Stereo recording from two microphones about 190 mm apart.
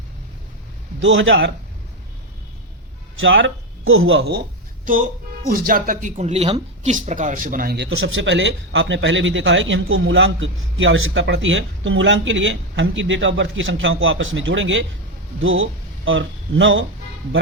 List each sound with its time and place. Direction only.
0.9 s a man's voice: 75° right (ahead or behind)
3.2 s a man's voice: 80° right
5.5 s speech: 50° right (ahead or behind)
7.9 s a man's voice: 85° right
15.4 s speech: 90° right